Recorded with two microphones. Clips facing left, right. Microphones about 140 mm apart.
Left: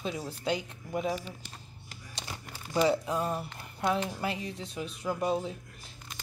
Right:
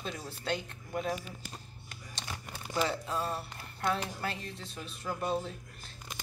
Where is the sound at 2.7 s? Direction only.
15° left (ahead or behind).